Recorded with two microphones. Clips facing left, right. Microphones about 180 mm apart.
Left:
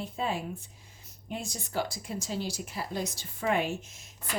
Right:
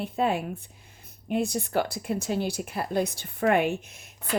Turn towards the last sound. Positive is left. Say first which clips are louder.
# right 2 dB
turn(degrees=-60)  # may be behind; listen again after turning